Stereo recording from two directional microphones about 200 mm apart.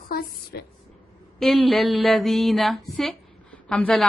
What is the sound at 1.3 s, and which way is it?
A woman's voice, centre (ahead or behind).